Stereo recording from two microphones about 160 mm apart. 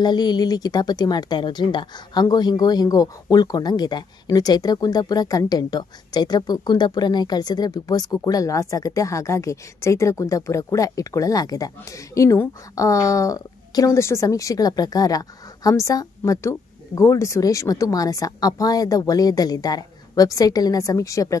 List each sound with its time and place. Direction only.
0.0 s a woman's voice: 25° left (ahead or behind)